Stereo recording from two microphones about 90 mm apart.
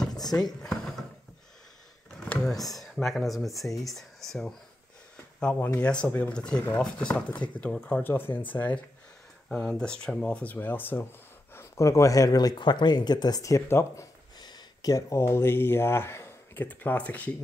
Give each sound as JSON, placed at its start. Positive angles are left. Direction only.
{"t": 0.6, "sound": "drawer open or close", "side_deg": 5}
{"t": 2.1, "sound": "a sound", "side_deg": 15}
{"t": 2.6, "sound": "speech", "side_deg": 0}
{"t": 5.4, "sound": "speech", "side_deg": 15}
{"t": 14.4, "sound": "speech", "side_deg": 45}
{"t": 16.6, "sound": "speech", "side_deg": 15}